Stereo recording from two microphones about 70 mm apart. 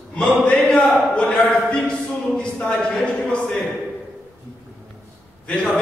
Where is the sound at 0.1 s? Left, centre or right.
Centre.